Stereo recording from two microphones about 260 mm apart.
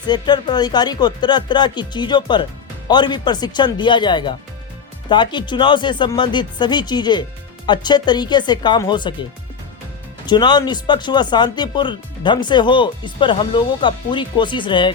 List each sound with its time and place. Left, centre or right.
0.1 s speech: centre
10.2 s speech: centre